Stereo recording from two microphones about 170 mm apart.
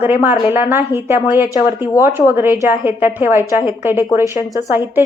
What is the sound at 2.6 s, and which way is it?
A woman's voice, 10° right (ahead or behind).